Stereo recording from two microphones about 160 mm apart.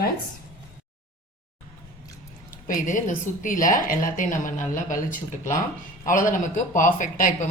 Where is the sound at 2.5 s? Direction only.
60° left (ahead or behind).